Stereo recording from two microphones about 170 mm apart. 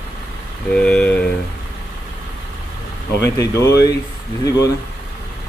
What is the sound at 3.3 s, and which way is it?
Speech, 15° left (ahead or behind).